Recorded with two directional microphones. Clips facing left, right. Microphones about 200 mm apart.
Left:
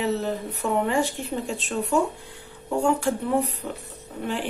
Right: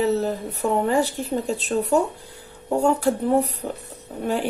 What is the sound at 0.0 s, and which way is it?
Speech, 35° right (ahead or behind).